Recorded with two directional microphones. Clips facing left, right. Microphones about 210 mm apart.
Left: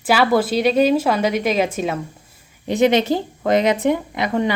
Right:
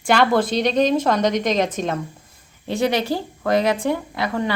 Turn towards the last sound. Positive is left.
turn(degrees=20)  # may be behind; listen again after turning